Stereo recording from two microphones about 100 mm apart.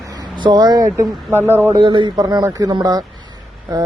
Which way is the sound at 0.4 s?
45° right (ahead or behind).